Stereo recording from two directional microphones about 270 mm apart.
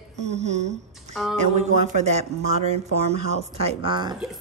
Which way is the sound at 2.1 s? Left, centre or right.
Right.